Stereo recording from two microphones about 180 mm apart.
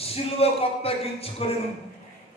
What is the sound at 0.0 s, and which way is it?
A man's voice, 35° left (ahead or behind).